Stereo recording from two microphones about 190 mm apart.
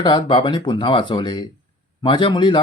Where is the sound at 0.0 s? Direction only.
25° left (ahead or behind).